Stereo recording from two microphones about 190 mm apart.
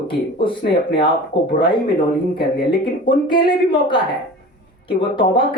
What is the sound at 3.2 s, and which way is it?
A woman's voice, 25° left (ahead or behind).